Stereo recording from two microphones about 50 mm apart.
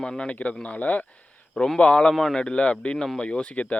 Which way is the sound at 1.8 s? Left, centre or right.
Centre.